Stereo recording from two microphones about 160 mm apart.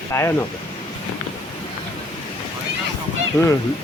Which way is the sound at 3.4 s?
20° left (ahead or behind).